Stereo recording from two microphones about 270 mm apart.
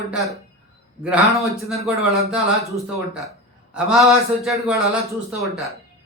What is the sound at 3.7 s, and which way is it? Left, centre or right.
A man's voice, centre.